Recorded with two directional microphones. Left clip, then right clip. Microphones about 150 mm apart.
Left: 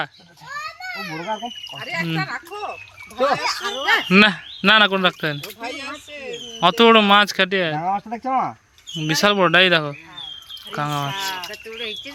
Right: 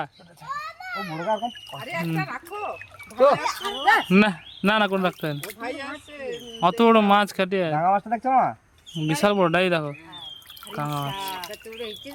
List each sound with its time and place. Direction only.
0.5 s children playing: 60° left (ahead or behind)
0.9 s speech: 10° right (ahead or behind)
1.3 s speech: 5° left (ahead or behind)
3.2 s speech: 20° right (ahead or behind)
4.1 s speech: 5° right (ahead or behind)
5.5 s speech: 15° left (ahead or behind)
6.6 s speech: centre (ahead or behind)
8.1 s speech: 20° right (ahead or behind); by 11.4 s 10° left (ahead or behind)
11.8 s speech: 30° right (ahead or behind)